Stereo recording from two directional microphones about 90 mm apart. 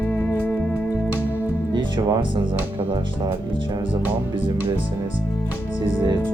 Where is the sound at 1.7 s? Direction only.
60° right (ahead or behind).